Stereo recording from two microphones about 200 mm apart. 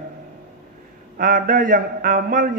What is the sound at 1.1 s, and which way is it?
A man's voice, 45° right (ahead or behind).